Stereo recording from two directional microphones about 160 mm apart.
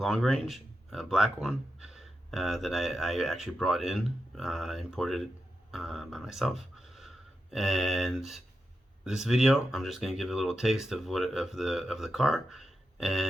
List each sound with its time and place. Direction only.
0.0 s speech: centre (ahead or behind)